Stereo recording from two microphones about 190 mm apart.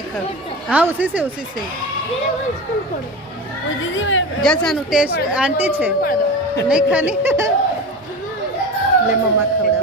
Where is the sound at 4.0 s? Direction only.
90° left.